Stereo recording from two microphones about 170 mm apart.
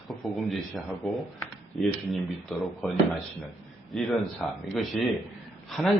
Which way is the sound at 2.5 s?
Centre (ahead or behind).